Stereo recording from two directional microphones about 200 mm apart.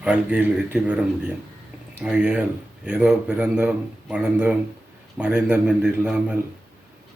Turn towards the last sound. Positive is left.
turn(degrees=-5)  # may be behind; listen again after turning